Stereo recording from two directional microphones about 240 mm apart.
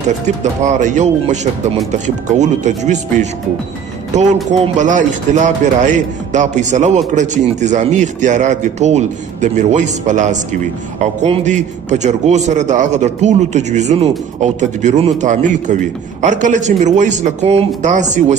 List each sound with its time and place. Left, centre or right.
0.4 s a man's voice: right